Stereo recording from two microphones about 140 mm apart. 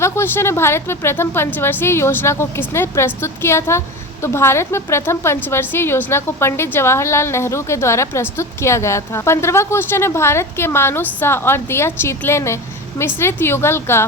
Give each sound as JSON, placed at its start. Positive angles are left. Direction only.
{"t": 0.0, "sound": "a woman's voice", "side_deg": 20}